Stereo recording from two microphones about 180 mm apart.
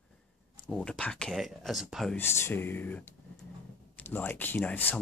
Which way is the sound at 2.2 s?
15° left (ahead or behind).